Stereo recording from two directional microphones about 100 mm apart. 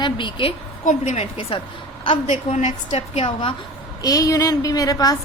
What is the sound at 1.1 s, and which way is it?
Speech, 70° left (ahead or behind).